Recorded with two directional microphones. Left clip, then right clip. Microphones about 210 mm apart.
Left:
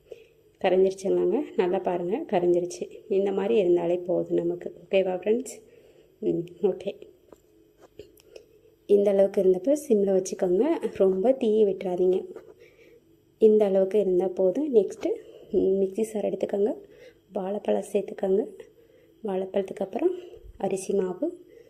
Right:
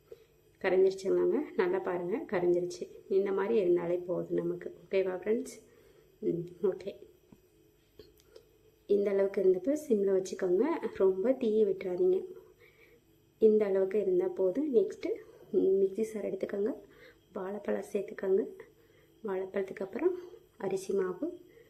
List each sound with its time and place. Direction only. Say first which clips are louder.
1.0 s speech: left 5 dB; 15° left (ahead or behind)
6.6 s speech: left 6 dB; 15° left (ahead or behind)
8.9 s speech: left 8 dB; 15° left (ahead or behind)
13.6 s a woman's voice: left 7 dB; 15° left (ahead or behind)